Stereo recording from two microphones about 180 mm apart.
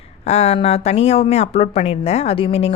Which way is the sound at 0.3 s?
35° left (ahead or behind).